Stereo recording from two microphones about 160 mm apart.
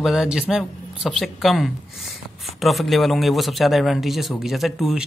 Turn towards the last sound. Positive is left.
turn(degrees=0)  # may be behind; listen again after turning